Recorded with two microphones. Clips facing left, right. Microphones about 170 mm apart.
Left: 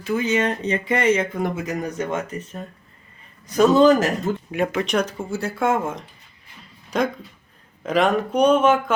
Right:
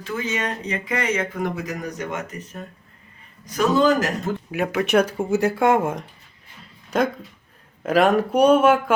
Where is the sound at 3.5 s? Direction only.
25° left (ahead or behind).